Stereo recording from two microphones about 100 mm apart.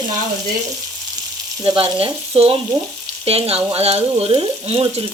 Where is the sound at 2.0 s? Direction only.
70° right (ahead or behind).